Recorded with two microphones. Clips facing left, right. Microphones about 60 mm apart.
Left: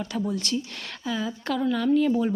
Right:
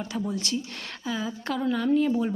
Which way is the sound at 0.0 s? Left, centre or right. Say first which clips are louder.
Left 2 dB; right.